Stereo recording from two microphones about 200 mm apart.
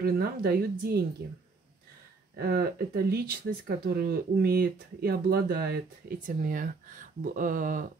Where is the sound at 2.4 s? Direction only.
50° right (ahead or behind).